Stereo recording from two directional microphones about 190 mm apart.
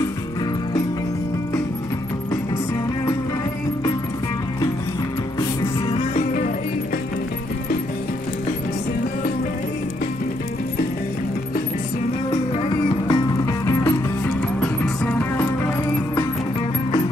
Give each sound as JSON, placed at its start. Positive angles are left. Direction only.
{"t": 5.4, "sound": "music", "side_deg": 25}
{"t": 6.1, "sound": "music", "side_deg": 45}
{"t": 12.3, "sound": "music", "side_deg": 25}